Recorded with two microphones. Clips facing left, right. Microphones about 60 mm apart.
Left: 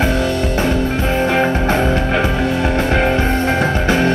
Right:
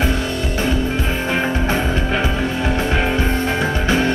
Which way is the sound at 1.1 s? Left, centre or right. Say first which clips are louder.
Left 7 dB; left.